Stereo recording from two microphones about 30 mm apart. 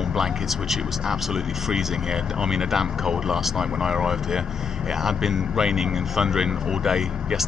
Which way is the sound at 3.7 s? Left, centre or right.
Right.